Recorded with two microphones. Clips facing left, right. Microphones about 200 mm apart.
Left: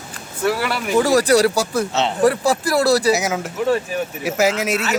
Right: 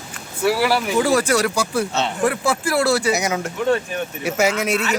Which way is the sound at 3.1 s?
Centre (ahead or behind).